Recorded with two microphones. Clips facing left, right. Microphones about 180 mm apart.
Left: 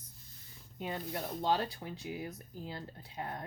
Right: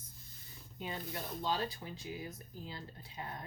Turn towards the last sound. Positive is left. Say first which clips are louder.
# left 4 dB
turn(degrees=55)  # may be behind; listen again after turning